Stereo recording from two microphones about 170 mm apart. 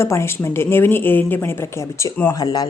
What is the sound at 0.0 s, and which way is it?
A woman's voice, 15° left (ahead or behind).